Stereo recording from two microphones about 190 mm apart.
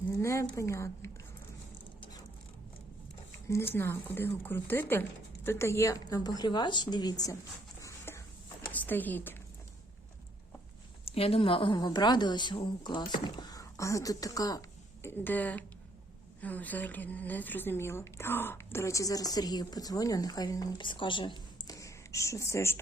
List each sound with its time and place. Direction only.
0.2 s a woman's voice: 15° left (ahead or behind)
3.5 s speech: 10° left (ahead or behind)
7.8 s a sound: 15° left (ahead or behind)
8.7 s speech: 10° left (ahead or behind)
11.0 s a woman's voice: 30° left (ahead or behind); by 22.8 s 15° left (ahead or behind)